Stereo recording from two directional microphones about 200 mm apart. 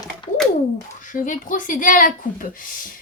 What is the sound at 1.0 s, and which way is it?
A woman's voice, 40° left (ahead or behind).